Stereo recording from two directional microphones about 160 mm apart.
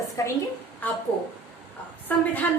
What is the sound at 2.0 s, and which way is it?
Speech, 10° left (ahead or behind).